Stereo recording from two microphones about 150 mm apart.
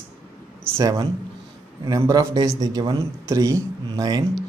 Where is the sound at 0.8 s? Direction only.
20° right (ahead or behind).